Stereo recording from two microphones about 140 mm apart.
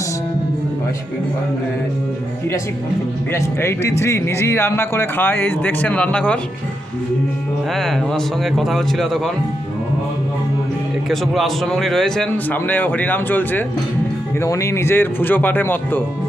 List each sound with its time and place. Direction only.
3.3 s speech: 20° left (ahead or behind)
7.7 s a man's voice: 5° left (ahead or behind)
11.1 s a man's voice: centre (ahead or behind)